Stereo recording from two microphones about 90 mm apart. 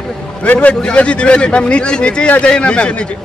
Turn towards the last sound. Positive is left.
turn(degrees=10)  # may be behind; listen again after turning